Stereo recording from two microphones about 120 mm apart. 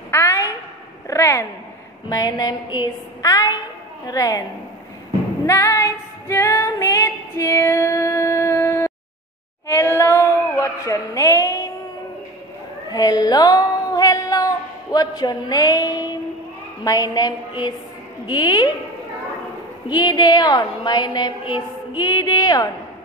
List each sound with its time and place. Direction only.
0.1 s a sound: 25° left (ahead or behind)
2.0 s a woman's voice: 30° left (ahead or behind)
5.5 s female singing: 25° left (ahead or behind)
9.7 s singing: 25° left (ahead or behind)
10.9 s a sound: 25° left (ahead or behind)
12.9 s female singing: 35° left (ahead or behind)
16.8 s a woman's voice: 30° left (ahead or behind)
19.9 s a woman's voice: 35° left (ahead or behind)